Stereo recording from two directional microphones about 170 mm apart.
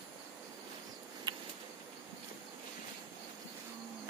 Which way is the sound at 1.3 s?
25° right (ahead or behind).